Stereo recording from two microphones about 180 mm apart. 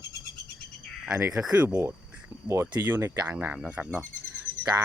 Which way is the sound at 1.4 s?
5° right (ahead or behind).